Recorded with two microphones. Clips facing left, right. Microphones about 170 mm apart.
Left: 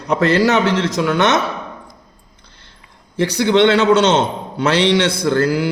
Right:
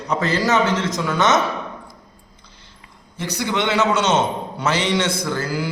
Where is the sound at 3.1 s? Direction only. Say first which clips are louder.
Left 10 dB; 75° left (ahead or behind).